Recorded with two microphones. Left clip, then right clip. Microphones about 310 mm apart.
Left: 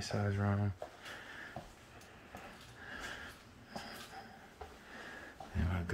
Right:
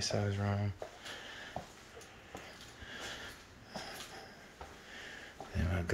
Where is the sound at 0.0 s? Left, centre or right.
Centre.